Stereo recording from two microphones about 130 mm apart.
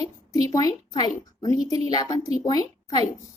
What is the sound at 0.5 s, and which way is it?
A woman's voice, 30° left (ahead or behind).